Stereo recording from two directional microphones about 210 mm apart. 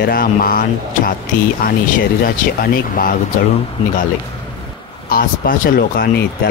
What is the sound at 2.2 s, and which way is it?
Speech, 45° left (ahead or behind).